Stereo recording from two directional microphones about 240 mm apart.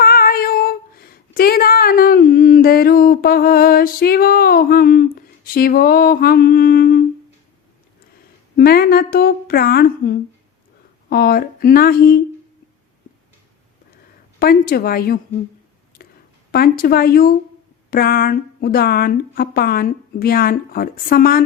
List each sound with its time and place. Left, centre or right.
0.0 s female singing: left
8.5 s speech: left
14.3 s speech: left
16.0 s a sound: left
16.5 s speech: left